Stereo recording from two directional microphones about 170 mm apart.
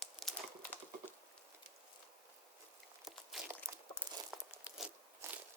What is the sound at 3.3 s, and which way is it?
Crunch, centre (ahead or behind).